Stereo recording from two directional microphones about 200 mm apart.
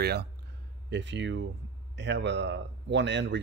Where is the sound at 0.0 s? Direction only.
55° right (ahead or behind).